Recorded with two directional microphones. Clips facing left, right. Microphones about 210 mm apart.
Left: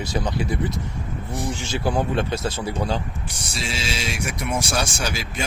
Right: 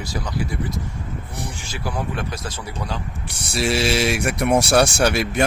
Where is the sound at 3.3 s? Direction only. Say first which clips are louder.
Right 11 dB; 65° right (ahead or behind).